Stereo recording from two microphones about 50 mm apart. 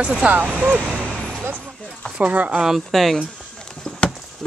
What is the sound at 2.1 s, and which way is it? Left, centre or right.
Speech, right.